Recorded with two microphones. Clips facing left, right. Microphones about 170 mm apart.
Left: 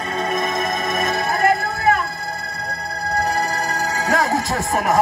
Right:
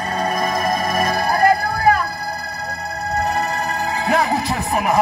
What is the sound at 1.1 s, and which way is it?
Music, 25° left (ahead or behind).